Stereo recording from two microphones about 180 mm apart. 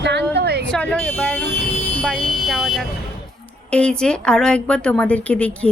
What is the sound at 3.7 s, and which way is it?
A woman's voice, 5° left (ahead or behind).